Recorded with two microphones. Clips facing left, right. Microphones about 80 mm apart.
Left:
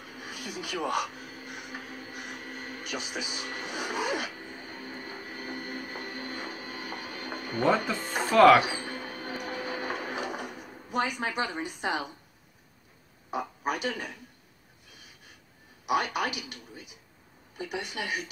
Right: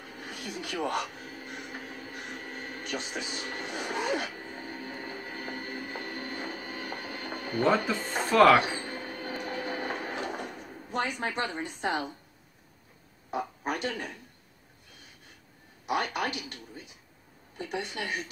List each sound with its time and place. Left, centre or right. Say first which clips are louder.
0.2 s speech: even; centre
1.5 s music: even; centre
2.9 s a woman's voice: even; centre
3.8 s a sound: even; centre
4.6 s music: right 2 dB; right
7.6 s speech: even; centre
8.8 s printer: even; right
10.1 s a sound: even; centre
10.9 s a woman's voice: left 1 dB; centre
13.3 s speech: left 1 dB; centre
15.8 s a woman's voice: left 2 dB; centre